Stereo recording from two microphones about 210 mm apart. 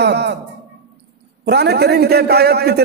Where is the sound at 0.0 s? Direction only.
50° right (ahead or behind).